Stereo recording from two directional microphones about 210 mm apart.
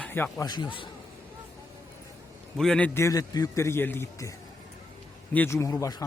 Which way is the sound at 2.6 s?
5° left (ahead or behind).